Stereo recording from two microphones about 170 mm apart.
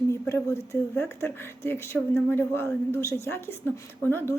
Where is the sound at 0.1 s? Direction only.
15° left (ahead or behind).